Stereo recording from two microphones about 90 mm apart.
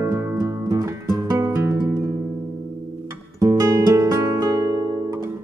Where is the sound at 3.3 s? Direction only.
40° right (ahead or behind).